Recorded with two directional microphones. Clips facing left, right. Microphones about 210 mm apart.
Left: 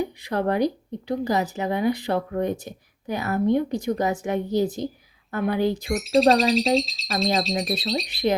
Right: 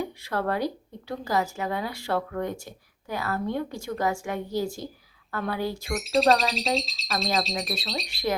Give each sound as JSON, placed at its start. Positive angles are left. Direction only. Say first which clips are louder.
{"t": 0.0, "sound": "speech", "louder": "left 4 dB", "side_deg": 20}
{"t": 5.9, "sound": "speech", "louder": "left 3 dB", "side_deg": 0}
{"t": 8.0, "sound": "speech", "louder": "left 4 dB", "side_deg": 20}